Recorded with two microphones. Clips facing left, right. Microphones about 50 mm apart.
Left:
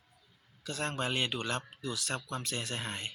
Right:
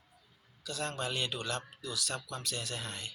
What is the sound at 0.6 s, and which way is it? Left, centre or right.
Speech, left.